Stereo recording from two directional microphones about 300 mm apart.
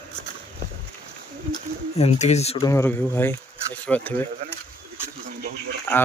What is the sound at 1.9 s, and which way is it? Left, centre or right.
Speech, left.